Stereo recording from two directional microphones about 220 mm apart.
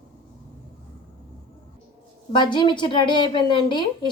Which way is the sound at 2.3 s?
20° left (ahead or behind).